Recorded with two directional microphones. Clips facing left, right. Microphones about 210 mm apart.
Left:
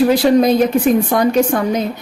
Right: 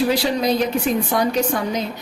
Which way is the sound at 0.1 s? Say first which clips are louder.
Left 8 dB; 50° left (ahead or behind).